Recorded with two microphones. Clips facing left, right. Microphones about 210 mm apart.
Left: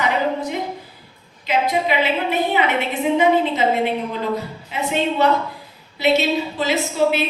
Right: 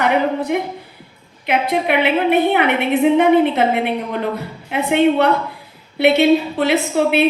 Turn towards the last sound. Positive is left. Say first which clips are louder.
# right 4 dB
turn(degrees=-60)  # may be behind; listen again after turning